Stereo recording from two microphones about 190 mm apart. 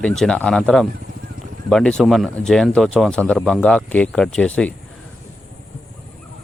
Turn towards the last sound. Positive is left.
turn(degrees=5)  # may be behind; listen again after turning